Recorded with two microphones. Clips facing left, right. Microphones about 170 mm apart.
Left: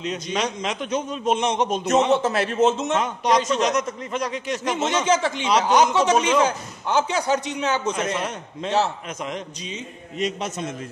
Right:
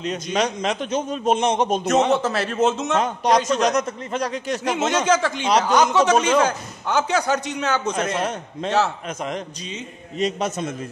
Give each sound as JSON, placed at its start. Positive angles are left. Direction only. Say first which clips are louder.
{"t": 0.0, "sound": "a man's voice", "louder": "right 3 dB", "side_deg": -40}
{"t": 6.4, "sound": "a man's voice", "louder": "even", "side_deg": -55}